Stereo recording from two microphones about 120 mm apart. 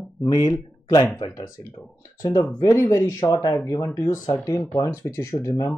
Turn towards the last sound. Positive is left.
turn(degrees=25)  # may be behind; listen again after turning